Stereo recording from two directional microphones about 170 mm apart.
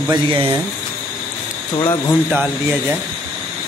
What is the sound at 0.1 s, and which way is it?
Speech, 30° right (ahead or behind).